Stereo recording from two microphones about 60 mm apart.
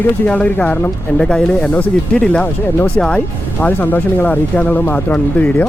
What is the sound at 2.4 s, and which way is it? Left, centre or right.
Speech, left.